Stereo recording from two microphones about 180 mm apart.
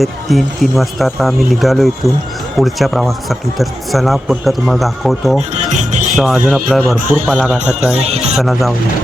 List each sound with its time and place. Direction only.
0.0 s speech: centre (ahead or behind)
5.6 s music: 40° right (ahead or behind)
6.1 s speech: centre (ahead or behind)
7.9 s speech: 35° right (ahead or behind)
8.4 s speech: centre (ahead or behind)